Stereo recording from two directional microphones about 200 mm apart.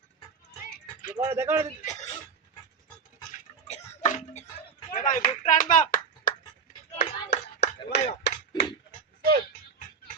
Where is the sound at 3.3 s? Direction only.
35° left (ahead or behind).